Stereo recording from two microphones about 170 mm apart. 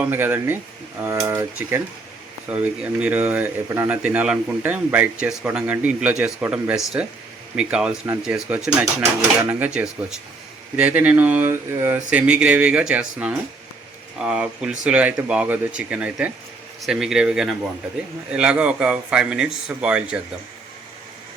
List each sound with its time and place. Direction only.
0.0 s speech: 15° right (ahead or behind)